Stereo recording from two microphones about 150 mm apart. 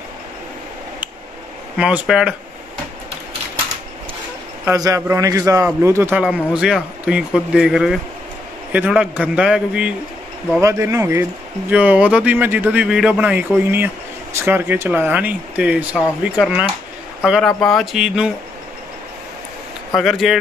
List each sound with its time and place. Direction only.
1.8 s speech: 5° right (ahead or behind)
4.6 s a man's voice: 20° right (ahead or behind); by 9.9 s 5° right (ahead or behind)
10.6 s a man's voice: 20° right (ahead or behind)
20.0 s speech: centre (ahead or behind)